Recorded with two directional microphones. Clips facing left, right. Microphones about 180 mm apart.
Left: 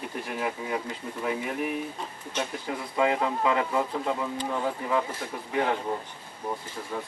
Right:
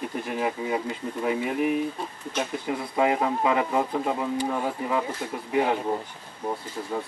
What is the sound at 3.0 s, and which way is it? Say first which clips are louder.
Speech: right 2 dB; 20° right (ahead or behind).